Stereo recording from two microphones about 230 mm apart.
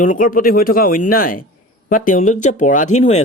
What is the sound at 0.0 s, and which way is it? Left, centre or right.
Speech, left.